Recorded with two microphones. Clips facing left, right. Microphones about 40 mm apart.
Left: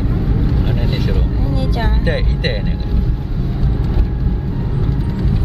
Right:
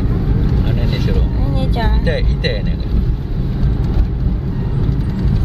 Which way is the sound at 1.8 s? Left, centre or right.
Centre.